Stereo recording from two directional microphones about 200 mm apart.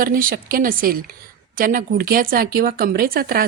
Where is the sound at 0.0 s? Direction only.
45° right (ahead or behind).